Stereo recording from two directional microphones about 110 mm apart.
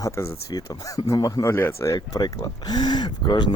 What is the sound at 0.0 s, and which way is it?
Speech, 35° left (ahead or behind).